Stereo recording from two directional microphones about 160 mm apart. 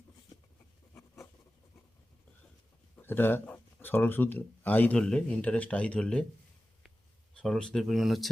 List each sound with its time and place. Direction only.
0.9 s writing: 20° left (ahead or behind)
2.9 s speech: 15° left (ahead or behind)
7.3 s speech: 5° left (ahead or behind)